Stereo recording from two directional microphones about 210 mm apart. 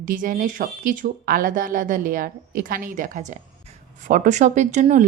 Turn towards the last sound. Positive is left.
turn(degrees=-35)  # may be behind; listen again after turning